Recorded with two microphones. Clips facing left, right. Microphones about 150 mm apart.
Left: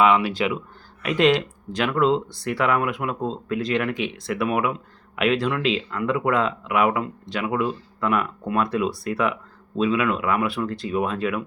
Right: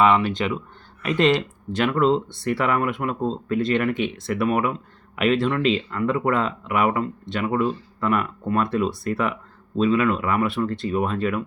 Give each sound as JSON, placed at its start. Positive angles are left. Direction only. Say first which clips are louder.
{"t": 0.0, "sound": "speech", "louder": "even", "side_deg": 5}